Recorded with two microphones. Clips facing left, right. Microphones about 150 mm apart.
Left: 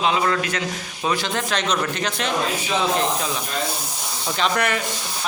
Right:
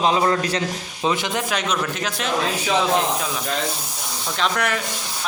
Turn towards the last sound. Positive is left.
turn(degrees=0)  # may be behind; listen again after turning